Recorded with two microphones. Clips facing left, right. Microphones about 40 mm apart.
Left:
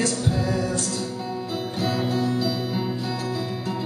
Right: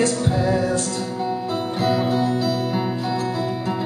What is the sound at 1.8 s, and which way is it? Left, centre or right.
Music, centre.